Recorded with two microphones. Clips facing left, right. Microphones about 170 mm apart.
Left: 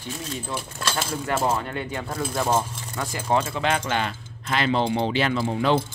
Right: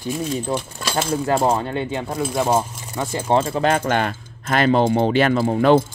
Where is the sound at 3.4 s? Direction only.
40° right (ahead or behind).